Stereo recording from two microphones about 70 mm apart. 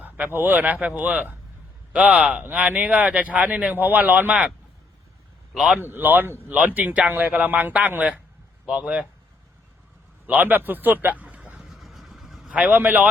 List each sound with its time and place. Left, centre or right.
0.3 s speech: right
5.5 s speech: centre
5.8 s speech: right
6.7 s speech: centre
10.2 s a man's voice: right
11.7 s vehicle: centre
12.5 s speech: right